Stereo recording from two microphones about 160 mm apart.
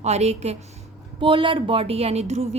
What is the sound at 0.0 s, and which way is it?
A woman's voice, 45° right (ahead or behind).